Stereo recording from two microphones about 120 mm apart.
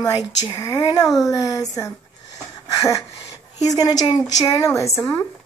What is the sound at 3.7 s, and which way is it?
A woman's voice, 35° left (ahead or behind).